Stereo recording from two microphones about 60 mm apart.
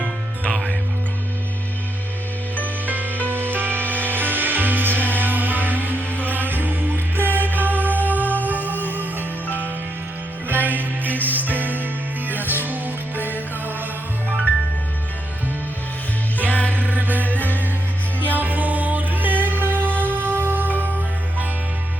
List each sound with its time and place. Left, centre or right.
0.5 s music: centre
2.8 s music: right
16.5 s music: left
16.7 s music: right
18.3 s music: right